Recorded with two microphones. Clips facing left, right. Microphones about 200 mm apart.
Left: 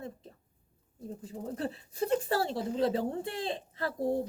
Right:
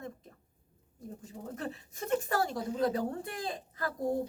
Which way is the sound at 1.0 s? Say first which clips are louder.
Left 4 dB; 35° left (ahead or behind).